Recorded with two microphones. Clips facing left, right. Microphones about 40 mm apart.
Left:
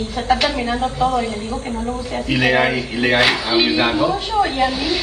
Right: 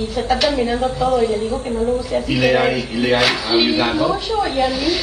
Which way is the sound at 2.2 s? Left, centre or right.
Centre.